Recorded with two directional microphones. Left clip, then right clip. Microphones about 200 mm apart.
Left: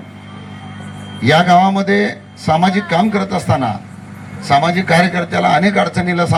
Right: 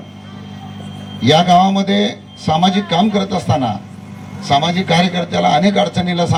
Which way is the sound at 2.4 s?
20° left (ahead or behind).